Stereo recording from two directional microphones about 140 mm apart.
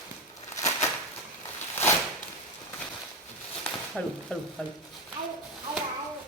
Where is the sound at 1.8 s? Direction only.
15° left (ahead or behind).